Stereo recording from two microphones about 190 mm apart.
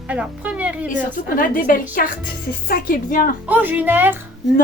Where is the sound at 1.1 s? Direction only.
45° left (ahead or behind).